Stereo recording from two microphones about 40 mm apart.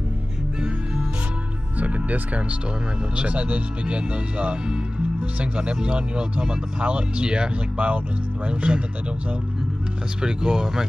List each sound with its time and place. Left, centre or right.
1.8 s music: right
3.2 s speech: right
7.7 s speech: right
10.2 s speech: centre